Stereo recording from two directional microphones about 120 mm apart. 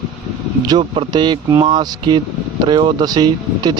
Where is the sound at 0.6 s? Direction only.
40° right (ahead or behind).